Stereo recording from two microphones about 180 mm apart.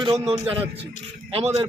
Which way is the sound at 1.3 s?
35° right (ahead or behind).